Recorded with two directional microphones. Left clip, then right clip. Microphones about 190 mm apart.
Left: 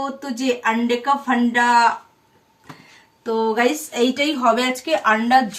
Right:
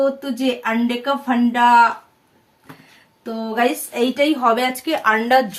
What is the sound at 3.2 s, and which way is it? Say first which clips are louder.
A woman's voice: left 2 dB; 10° right (ahead or behind).